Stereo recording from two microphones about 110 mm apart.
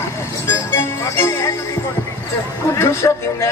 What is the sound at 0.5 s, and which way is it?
Music, 20° left (ahead or behind).